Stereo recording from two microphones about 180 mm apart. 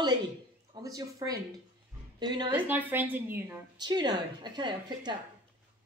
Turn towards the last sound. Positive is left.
turn(degrees=-25)  # may be behind; listen again after turning